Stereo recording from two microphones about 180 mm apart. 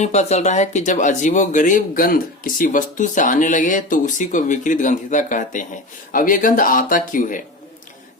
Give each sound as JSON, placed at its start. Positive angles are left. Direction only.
{"t": 0.0, "sound": "speech", "side_deg": 40}